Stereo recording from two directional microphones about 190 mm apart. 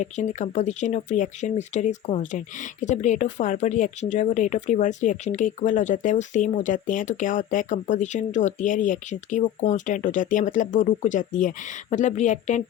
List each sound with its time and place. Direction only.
0.0 s speech: 40° left (ahead or behind)